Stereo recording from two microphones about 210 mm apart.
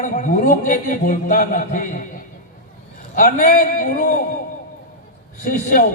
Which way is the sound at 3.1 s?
40° left (ahead or behind).